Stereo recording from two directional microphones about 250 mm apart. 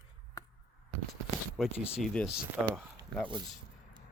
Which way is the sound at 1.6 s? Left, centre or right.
Centre.